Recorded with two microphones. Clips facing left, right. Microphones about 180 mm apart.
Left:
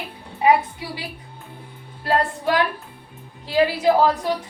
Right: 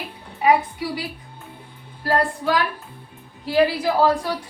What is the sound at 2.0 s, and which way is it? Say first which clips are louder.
Speech: even; 25° left (ahead or behind).